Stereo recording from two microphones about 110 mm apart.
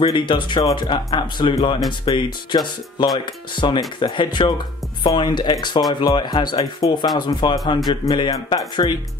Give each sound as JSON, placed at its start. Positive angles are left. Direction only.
{"t": 0.0, "sound": "speech", "side_deg": 50}